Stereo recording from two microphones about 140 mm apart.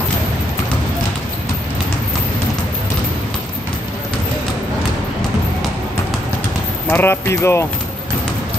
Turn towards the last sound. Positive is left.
turn(degrees=20)  # may be behind; listen again after turning